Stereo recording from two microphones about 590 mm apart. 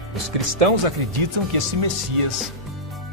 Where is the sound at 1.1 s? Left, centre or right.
Right.